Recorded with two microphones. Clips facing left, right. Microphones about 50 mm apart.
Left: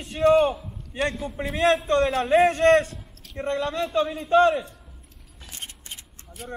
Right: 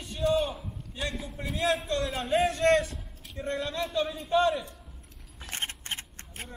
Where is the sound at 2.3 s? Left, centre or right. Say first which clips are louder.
Left 5 dB; left.